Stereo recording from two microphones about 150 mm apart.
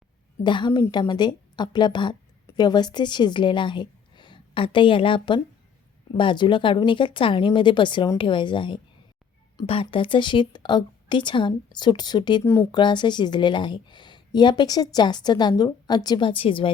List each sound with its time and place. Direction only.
0.4 s a woman's voice: 30° left (ahead or behind)
12.4 s speech: 15° left (ahead or behind)
12.7 s a woman's voice: 30° left (ahead or behind)